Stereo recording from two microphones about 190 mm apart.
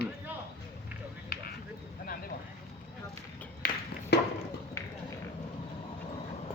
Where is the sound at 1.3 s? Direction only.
55° left (ahead or behind).